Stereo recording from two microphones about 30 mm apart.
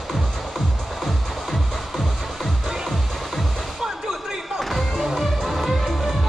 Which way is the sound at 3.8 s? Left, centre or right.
Centre.